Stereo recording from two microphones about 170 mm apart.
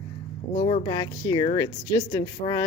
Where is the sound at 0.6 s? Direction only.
45° left (ahead or behind).